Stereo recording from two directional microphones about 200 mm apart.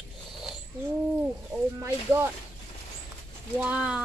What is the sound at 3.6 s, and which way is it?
Speech, 5° right (ahead or behind).